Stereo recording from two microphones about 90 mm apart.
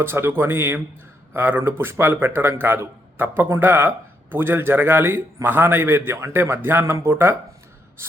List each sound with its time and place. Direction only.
0.0 s speech: 25° right (ahead or behind)